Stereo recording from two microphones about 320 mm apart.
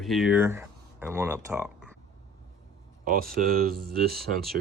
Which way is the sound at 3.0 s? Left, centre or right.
Right.